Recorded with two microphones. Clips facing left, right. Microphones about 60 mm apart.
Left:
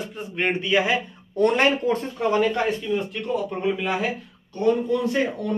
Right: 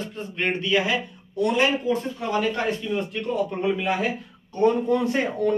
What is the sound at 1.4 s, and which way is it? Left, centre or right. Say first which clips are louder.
Speech: left 2 dB; left.